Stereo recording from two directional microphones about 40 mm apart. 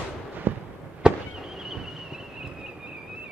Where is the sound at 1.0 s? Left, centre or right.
Right.